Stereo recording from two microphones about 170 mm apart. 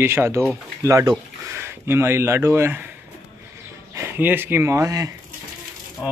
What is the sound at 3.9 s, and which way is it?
Speech, 15° right (ahead or behind).